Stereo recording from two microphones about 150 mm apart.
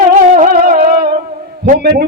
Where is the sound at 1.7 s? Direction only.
90° right.